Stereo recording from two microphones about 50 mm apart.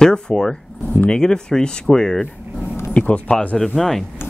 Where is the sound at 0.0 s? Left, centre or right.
Centre.